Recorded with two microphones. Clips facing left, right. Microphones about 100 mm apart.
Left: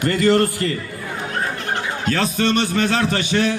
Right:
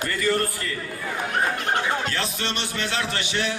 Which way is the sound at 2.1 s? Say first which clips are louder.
Left 9 dB; 45° left (ahead or behind).